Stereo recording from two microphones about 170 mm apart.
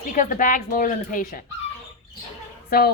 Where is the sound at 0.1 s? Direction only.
50° left (ahead or behind).